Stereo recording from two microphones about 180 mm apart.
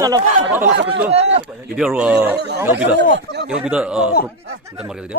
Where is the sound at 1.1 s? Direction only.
35° right (ahead or behind).